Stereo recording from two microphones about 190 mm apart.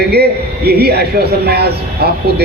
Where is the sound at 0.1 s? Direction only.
55° right (ahead or behind).